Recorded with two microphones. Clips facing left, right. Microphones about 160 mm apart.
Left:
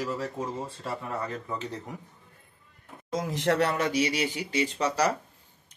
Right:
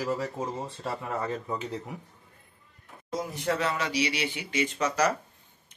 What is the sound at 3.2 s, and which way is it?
Speech, 90° left.